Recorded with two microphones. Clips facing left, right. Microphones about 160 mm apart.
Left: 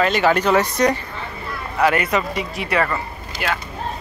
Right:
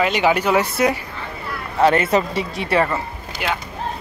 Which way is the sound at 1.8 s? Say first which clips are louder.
Right 3 dB; 30° right (ahead or behind).